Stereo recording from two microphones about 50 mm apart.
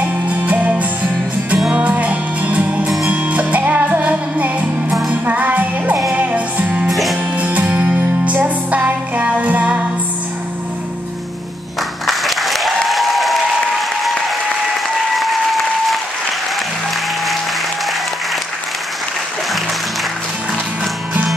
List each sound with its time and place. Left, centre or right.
0.0 s music: right
6.9 s music: centre
7.3 s music: right
12.1 s applause: centre
15.1 s applause: centre